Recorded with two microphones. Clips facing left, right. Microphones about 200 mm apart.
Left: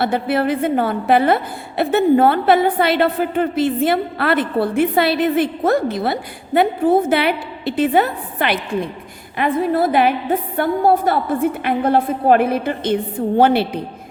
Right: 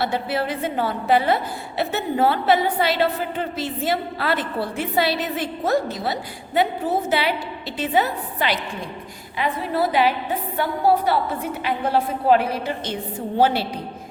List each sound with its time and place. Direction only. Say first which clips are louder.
0.0 s a woman's voice: left 6 dB; 55° left (ahead or behind)